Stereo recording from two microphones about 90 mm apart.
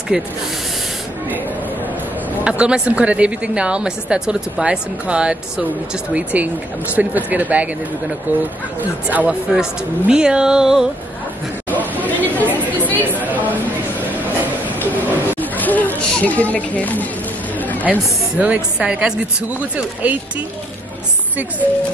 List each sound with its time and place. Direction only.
0.1 s a woman's voice: 10° right (ahead or behind)
2.4 s a woman's voice: 10° right (ahead or behind)
11.7 s chatter: 20° left (ahead or behind)
12.0 s chatter: 20° right (ahead or behind)
12.6 s chatter: 20° left (ahead or behind)
13.3 s chatter: 20° right (ahead or behind)
15.5 s a sound: 20° left (ahead or behind)
18.4 s a woman's voice: 15° right (ahead or behind)